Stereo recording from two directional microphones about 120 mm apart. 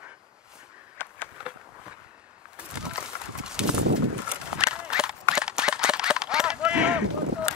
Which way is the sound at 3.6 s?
5° right (ahead or behind).